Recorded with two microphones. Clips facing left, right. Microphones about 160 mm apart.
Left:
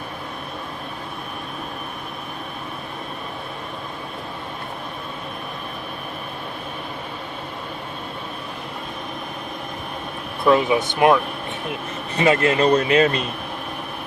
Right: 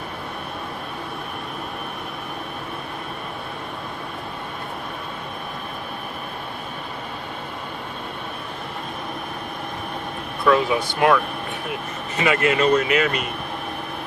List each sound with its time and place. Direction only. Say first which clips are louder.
10.4 s speech: left 2 dB; 20° left (ahead or behind)
12.1 s a man's voice: left 2 dB; 35° left (ahead or behind)